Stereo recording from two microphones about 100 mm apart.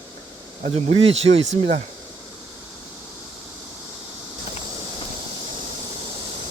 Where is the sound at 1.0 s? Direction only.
90° right.